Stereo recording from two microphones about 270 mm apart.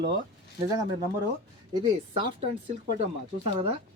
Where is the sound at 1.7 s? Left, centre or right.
Centre.